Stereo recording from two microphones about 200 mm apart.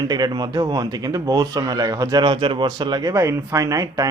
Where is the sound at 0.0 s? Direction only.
20° right (ahead or behind).